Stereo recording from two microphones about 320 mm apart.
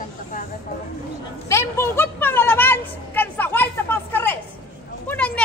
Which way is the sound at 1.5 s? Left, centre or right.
Centre.